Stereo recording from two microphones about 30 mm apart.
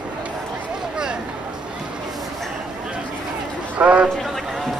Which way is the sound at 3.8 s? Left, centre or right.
Right.